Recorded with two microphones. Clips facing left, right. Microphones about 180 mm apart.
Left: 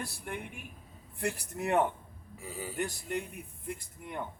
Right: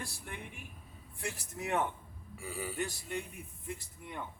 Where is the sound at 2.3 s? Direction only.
25° left (ahead or behind).